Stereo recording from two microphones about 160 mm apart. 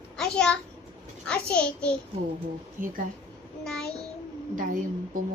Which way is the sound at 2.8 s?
60° right (ahead or behind).